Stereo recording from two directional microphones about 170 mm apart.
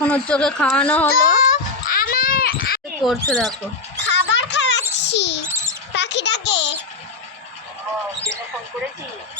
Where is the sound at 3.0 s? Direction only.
Centre (ahead or behind).